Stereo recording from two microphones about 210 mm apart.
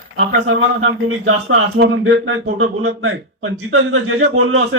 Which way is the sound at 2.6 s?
85° right.